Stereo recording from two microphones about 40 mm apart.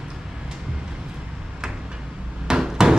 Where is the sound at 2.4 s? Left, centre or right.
Centre.